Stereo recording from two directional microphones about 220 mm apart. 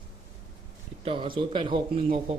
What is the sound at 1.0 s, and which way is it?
Speech, 20° right (ahead or behind).